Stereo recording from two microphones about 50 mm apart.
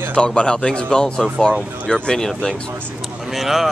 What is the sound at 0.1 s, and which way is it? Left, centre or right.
Speech, left.